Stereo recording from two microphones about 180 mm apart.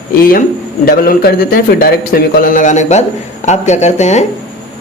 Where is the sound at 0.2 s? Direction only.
50° left (ahead or behind).